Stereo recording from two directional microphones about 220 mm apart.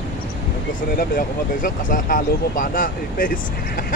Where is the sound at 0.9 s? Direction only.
40° left (ahead or behind).